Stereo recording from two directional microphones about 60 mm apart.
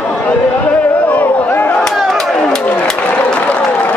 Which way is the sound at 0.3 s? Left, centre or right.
Left.